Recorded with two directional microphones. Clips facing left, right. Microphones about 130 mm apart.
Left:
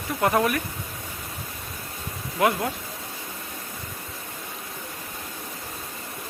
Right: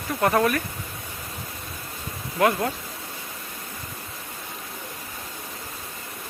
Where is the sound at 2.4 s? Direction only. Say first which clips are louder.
Right 1 dB; 15° left (ahead or behind).